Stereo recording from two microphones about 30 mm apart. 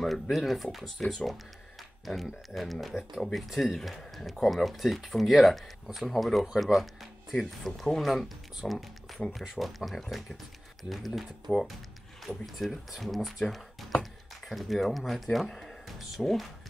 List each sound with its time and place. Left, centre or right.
0.0 s speech: centre
0.9 s speech: centre
2.5 s speech: centre
16.2 s speech: left